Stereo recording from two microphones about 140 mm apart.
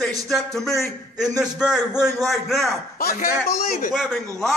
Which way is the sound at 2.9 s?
90° left.